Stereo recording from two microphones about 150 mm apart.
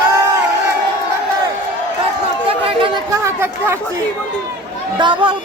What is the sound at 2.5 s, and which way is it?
Chatter, 35° right (ahead or behind).